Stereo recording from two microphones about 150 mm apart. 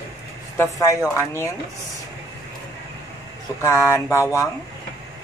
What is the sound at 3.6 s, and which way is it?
Speech, 15° left (ahead or behind).